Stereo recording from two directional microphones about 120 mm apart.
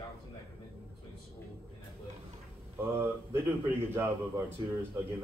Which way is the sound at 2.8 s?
20° right (ahead or behind).